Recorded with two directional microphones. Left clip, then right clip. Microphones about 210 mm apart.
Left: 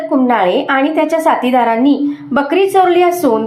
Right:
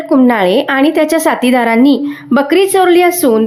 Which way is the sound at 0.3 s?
40° right (ahead or behind).